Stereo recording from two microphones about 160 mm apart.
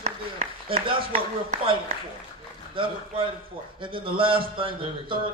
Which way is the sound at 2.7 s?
35° right (ahead or behind).